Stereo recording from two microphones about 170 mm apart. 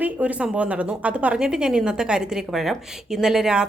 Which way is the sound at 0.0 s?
10° right (ahead or behind).